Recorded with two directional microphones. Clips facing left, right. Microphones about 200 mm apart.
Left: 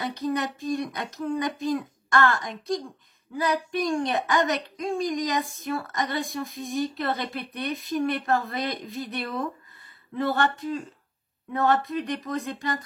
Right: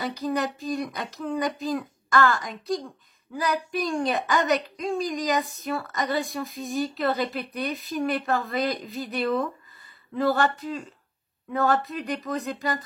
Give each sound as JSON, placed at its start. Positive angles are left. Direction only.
{"t": 0.0, "sound": "a woman's voice", "side_deg": 0}